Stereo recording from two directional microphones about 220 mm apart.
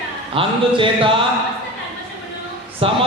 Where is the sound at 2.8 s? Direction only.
25° right (ahead or behind).